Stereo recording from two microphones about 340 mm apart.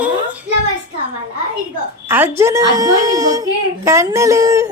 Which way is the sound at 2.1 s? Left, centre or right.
Centre.